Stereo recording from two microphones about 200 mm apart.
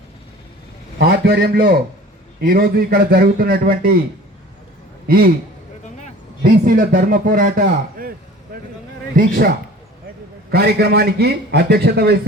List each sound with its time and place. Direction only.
0.9 s a man's voice: 50° right (ahead or behind)
5.0 s a man's voice: 50° right (ahead or behind)
6.4 s a man's voice: 45° right (ahead or behind)
8.5 s a sound: 50° right (ahead or behind)
9.1 s a man's voice: 40° right (ahead or behind)
10.5 s a man's voice: 50° right (ahead or behind)